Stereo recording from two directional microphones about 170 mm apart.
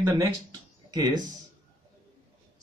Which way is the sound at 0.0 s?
15° right (ahead or behind).